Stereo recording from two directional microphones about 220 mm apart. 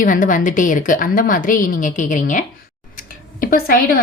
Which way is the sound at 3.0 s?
40° left (ahead or behind).